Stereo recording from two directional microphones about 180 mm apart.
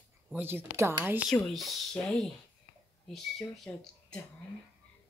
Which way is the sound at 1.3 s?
Centre (ahead or behind).